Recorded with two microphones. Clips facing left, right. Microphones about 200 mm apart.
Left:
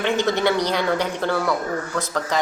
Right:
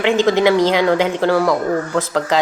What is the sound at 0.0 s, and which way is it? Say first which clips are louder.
Speech: right 6 dB; 90° right.